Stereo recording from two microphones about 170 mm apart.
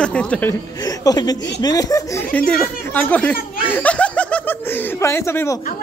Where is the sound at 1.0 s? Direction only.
25° left (ahead or behind).